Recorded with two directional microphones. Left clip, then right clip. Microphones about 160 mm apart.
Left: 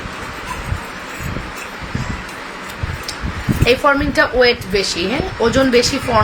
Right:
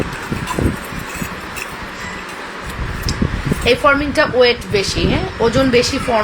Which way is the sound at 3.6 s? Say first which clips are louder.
Right 1 dB; 10° left (ahead or behind).